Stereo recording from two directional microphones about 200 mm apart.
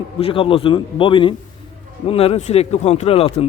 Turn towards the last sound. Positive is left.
turn(degrees=30)  # may be behind; listen again after turning